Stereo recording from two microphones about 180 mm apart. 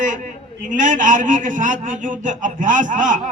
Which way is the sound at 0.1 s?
45° right (ahead or behind).